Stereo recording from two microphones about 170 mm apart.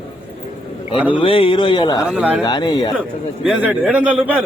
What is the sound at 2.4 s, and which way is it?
Speech, 25° left (ahead or behind).